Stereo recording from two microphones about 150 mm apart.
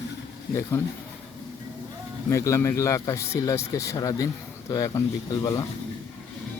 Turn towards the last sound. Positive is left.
turn(degrees=20)  # may be behind; listen again after turning